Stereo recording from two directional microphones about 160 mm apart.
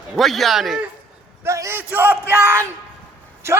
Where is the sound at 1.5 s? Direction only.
20° right (ahead or behind).